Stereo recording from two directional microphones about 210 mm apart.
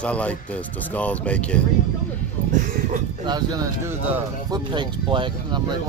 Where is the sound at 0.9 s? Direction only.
5° left (ahead or behind).